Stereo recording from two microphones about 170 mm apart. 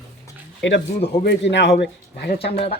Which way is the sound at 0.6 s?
90° left.